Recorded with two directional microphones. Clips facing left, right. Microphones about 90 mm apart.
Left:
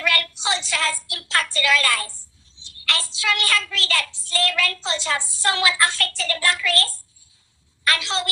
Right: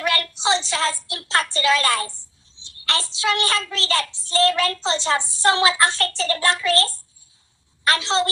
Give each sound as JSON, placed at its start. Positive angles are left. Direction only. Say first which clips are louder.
{"t": 0.0, "sound": "a woman's voice", "louder": "right 2 dB", "side_deg": -30}